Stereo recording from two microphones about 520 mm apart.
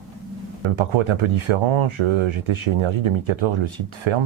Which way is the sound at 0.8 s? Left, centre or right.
Right.